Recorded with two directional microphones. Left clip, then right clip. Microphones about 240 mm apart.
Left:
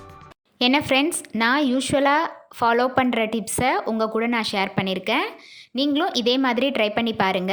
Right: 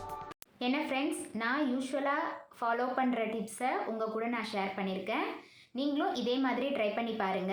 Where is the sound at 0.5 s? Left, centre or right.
Left.